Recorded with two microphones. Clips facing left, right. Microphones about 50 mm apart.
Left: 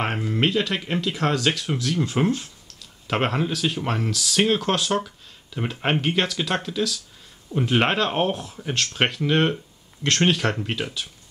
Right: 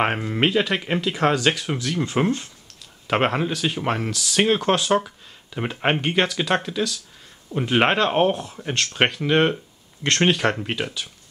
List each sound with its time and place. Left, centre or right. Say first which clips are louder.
0.0 s speech: right 3 dB; centre
0.5 s speech: right 2 dB; centre